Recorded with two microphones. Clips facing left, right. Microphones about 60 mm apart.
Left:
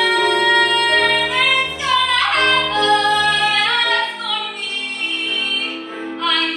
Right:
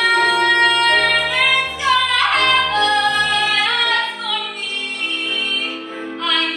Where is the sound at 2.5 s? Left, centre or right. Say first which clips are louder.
Even; centre.